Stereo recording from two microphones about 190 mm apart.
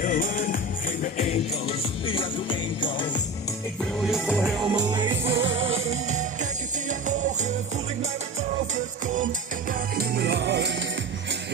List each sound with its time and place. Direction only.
0.0 s music: 45° left (ahead or behind); by 3.2 s 25° left (ahead or behind)
4.1 s music: centre (ahead or behind)
4.9 s music: 25° right (ahead or behind)
5.4 s music: 90° right
5.9 s music: 40° right (ahead or behind)
9.0 s music: 40° right (ahead or behind); by 10.7 s 65° right (ahead or behind)